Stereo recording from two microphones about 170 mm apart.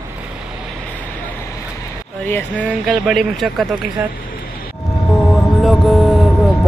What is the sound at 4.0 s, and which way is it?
Speech, 10° right (ahead or behind).